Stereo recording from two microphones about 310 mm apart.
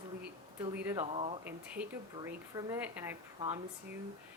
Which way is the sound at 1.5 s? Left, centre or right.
Centre.